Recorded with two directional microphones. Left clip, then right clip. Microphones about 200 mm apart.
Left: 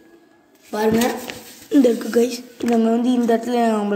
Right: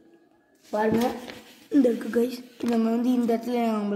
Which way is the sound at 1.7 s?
20° right (ahead or behind).